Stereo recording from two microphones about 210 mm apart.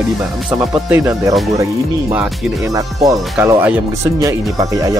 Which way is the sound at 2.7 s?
15° right (ahead or behind).